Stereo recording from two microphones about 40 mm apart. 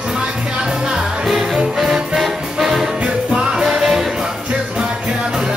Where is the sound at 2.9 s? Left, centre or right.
Right.